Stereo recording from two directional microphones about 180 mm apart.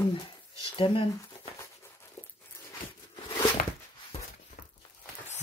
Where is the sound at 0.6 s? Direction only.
30° left (ahead or behind).